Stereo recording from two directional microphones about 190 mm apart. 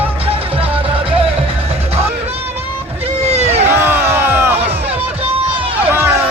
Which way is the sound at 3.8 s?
10° right (ahead or behind).